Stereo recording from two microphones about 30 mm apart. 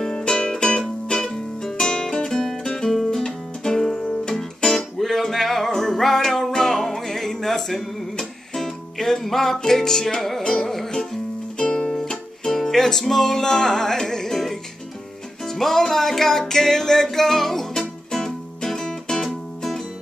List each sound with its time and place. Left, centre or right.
0.4 s music: left
1.2 s music: centre
2.9 s music: centre
10.4 s music: centre
11.5 s music: left